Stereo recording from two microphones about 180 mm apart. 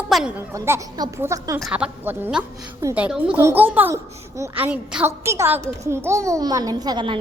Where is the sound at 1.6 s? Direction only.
5° right (ahead or behind).